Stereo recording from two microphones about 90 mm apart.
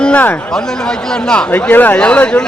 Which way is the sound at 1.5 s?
20° left (ahead or behind).